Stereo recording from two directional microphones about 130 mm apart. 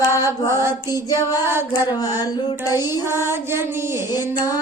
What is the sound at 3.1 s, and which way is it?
Child singing, 20° right (ahead or behind).